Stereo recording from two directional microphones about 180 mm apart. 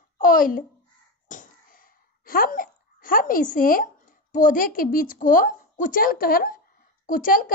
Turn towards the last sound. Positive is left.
turn(degrees=50)  # may be behind; listen again after turning